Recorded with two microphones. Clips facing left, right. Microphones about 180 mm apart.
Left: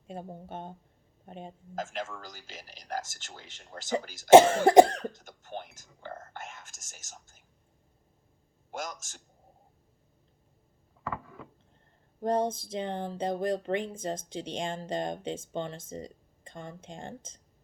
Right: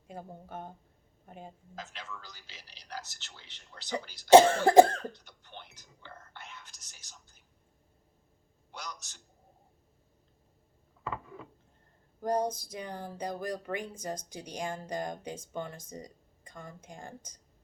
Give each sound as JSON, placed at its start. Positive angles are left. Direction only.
{"t": 0.1, "sound": "speech", "side_deg": 25}
{"t": 1.7, "sound": "a man's voice", "side_deg": 45}
{"t": 4.3, "sound": "speech", "side_deg": 20}
{"t": 5.1, "sound": "whispering", "side_deg": 45}
{"t": 8.7, "sound": "a man's voice", "side_deg": 45}
{"t": 11.0, "sound": "a sound", "side_deg": -20}
{"t": 12.2, "sound": "speech", "side_deg": 25}